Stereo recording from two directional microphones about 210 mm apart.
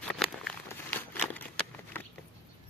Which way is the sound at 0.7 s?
10° left (ahead or behind).